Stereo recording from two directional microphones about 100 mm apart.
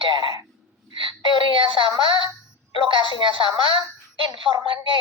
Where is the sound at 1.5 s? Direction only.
55° right (ahead or behind).